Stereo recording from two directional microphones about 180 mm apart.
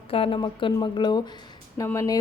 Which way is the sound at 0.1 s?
30° left (ahead or behind).